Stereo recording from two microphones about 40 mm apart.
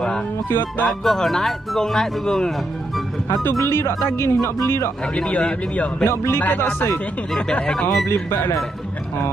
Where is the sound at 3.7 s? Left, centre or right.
Left.